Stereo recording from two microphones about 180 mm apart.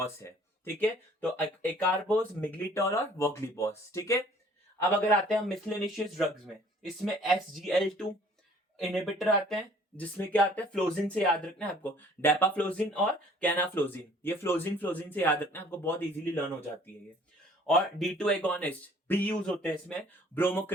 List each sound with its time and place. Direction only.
0.0 s speech: 15° left (ahead or behind)
4.8 s speech: 5° left (ahead or behind)
18.0 s speech: 5° left (ahead or behind)